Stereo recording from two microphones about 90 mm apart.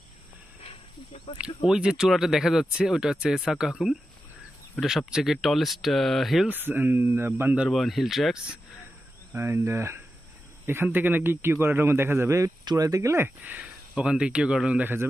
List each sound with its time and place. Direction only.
1.4 s speech: 10° right (ahead or behind)
6.5 s speech: 20° right (ahead or behind)
7.7 s speech: centre (ahead or behind)
9.3 s speech: 25° right (ahead or behind)
12.6 s speech: 40° right (ahead or behind); by 15.0 s 20° right (ahead or behind)